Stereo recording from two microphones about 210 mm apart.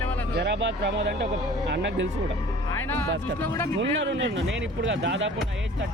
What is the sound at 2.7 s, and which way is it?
Music, 10° left (ahead or behind).